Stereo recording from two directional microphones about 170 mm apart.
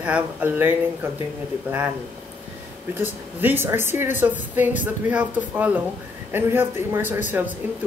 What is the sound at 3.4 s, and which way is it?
Speech, 15° right (ahead or behind).